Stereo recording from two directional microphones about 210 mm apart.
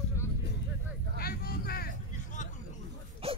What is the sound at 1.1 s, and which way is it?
Vehicle, 45° left (ahead or behind).